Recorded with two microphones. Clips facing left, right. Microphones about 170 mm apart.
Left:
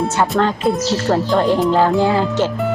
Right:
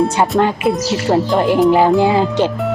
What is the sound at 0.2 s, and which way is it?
Speech, 15° right (ahead or behind).